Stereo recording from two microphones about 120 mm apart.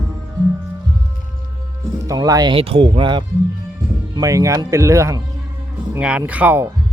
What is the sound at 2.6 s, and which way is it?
Speech, 50° right (ahead or behind).